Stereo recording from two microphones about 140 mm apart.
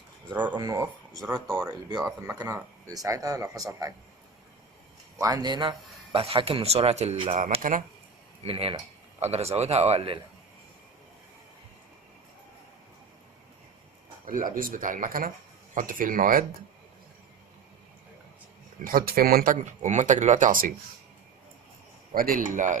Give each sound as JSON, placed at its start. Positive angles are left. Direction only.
{"t": 0.5, "sound": "speech", "side_deg": -25}
{"t": 1.2, "sound": "speech", "side_deg": -5}
{"t": 2.2, "sound": "speech", "side_deg": -20}
{"t": 5.1, "sound": "speech", "side_deg": -25}
{"t": 7.6, "sound": "speech", "side_deg": -70}
{"t": 8.4, "sound": "speech", "side_deg": -40}
{"t": 14.3, "sound": "speech", "side_deg": -80}
{"t": 18.8, "sound": "speech", "side_deg": -90}
{"t": 22.1, "sound": "speech", "side_deg": -90}